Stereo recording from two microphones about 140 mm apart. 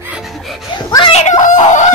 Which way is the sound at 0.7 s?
35° left (ahead or behind).